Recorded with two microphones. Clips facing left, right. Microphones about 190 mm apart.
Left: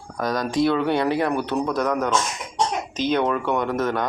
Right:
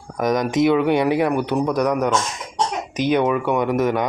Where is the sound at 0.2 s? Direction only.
20° right (ahead or behind).